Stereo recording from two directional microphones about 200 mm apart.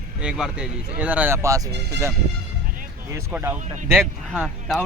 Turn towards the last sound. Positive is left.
turn(degrees=0)  # may be behind; listen again after turning